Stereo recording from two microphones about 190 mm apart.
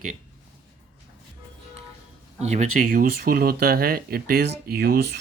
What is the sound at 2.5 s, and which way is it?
Speech, 40° right (ahead or behind).